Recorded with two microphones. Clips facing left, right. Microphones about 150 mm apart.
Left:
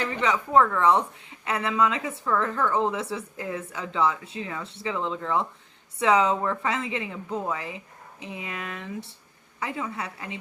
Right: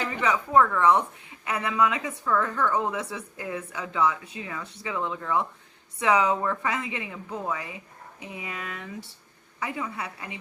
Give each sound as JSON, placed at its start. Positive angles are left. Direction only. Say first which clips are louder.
{"t": 0.1, "sound": "a woman's voice", "louder": "even", "side_deg": 25}